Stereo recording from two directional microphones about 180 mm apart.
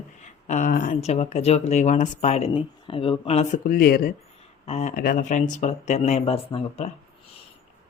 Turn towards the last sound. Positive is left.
turn(degrees=35)  # may be behind; listen again after turning